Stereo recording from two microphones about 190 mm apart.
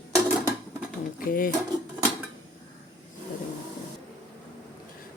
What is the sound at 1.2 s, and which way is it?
Speech, 50° left (ahead or behind).